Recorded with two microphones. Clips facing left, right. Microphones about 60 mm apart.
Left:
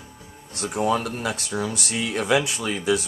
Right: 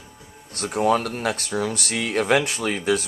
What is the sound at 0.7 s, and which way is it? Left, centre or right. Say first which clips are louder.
Speech: right 3 dB; right.